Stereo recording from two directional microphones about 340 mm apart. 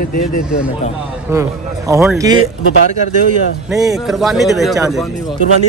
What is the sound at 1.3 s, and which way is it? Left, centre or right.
Speech, centre.